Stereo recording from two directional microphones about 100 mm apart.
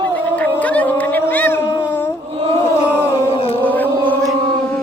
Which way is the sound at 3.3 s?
70° left (ahead or behind).